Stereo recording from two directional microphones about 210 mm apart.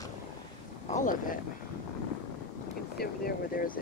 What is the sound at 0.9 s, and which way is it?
Speech, 40° left (ahead or behind).